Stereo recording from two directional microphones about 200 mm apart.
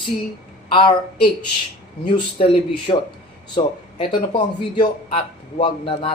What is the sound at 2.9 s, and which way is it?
Speech, 30° left (ahead or behind).